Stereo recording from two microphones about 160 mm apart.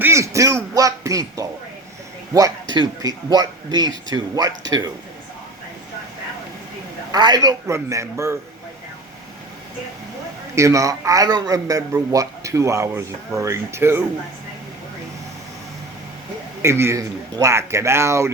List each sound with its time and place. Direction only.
0.0 s a man's voice: 20° right (ahead or behind)
7.1 s a man's voice: 25° right (ahead or behind)
10.5 s a man's voice: 20° right (ahead or behind)
16.6 s speech: 15° right (ahead or behind)